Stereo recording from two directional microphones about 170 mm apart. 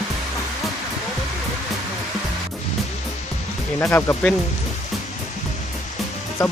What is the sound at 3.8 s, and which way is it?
Speech, 15° left (ahead or behind).